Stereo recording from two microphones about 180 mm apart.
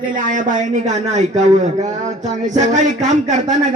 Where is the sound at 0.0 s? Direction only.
50° right (ahead or behind).